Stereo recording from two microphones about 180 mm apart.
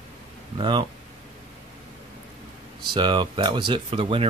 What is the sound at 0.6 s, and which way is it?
Speech, 25° right (ahead or behind).